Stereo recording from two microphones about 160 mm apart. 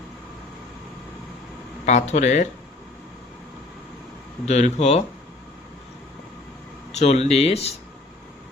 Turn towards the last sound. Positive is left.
turn(degrees=40)  # may be behind; listen again after turning